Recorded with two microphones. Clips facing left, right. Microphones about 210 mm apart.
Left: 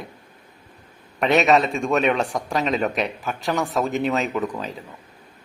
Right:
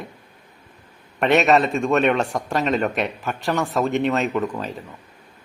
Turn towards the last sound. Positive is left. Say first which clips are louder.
# right 2 dB
turn(degrees=0)  # may be behind; listen again after turning